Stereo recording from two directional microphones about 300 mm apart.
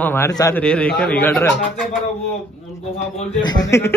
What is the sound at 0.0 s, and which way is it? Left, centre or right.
Speech, centre.